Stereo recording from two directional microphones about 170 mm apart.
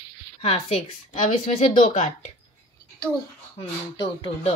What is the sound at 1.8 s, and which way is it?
Speech, 45° left (ahead or behind).